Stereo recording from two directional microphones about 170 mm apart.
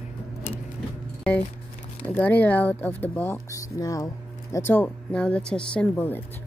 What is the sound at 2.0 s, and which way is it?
Speech, 10° left (ahead or behind).